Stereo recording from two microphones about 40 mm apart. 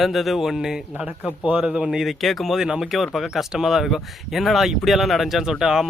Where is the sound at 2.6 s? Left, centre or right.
Centre.